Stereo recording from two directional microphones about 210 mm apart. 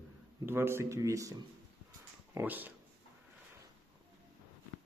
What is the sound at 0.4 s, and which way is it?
Speech, 10° right (ahead or behind).